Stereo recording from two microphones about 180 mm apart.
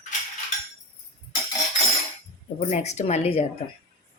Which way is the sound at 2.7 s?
40° left (ahead or behind).